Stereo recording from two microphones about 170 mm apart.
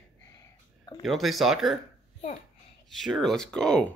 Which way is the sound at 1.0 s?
Centre (ahead or behind).